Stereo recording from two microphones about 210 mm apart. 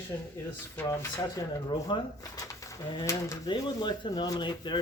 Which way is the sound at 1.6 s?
20° left (ahead or behind).